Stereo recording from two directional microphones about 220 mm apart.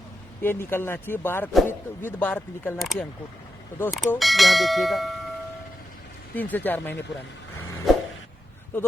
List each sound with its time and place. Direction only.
0.4 s speech: 10° left (ahead or behind)
6.3 s speech: 10° left (ahead or behind)
7.9 s a sound: centre (ahead or behind)